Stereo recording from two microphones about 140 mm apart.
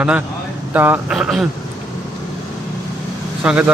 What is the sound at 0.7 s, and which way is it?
Speech, 15° right (ahead or behind).